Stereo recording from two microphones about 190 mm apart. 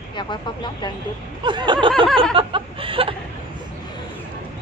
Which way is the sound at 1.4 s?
25° right (ahead or behind).